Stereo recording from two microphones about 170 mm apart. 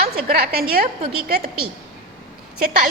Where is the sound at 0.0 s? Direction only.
65° right (ahead or behind).